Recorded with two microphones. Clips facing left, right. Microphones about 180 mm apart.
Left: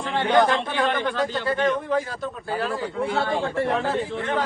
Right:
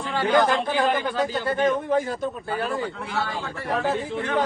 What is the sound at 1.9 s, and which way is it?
Speech, 25° right (ahead or behind).